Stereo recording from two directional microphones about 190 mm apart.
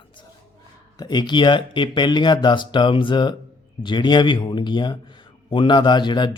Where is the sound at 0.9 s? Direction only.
20° left (ahead or behind).